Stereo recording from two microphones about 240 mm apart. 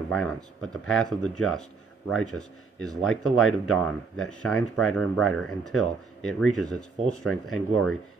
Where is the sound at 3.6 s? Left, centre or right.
Centre.